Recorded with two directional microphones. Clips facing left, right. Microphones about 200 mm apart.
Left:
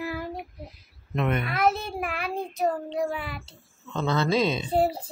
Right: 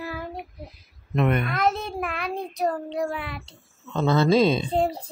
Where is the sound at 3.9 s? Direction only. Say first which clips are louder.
Right 5 dB; 30° right (ahead or behind).